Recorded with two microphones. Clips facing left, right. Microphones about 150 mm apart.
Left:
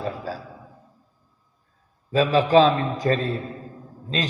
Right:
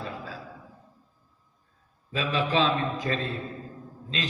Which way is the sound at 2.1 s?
35° left (ahead or behind).